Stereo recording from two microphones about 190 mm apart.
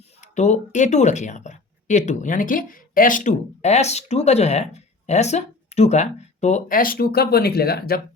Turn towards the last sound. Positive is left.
turn(degrees=55)  # may be behind; listen again after turning